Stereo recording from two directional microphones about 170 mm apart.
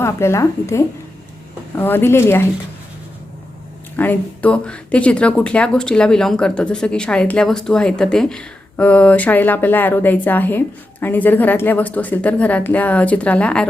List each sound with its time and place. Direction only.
0.0 s speech: 15° left (ahead or behind)
3.9 s speech: 10° left (ahead or behind)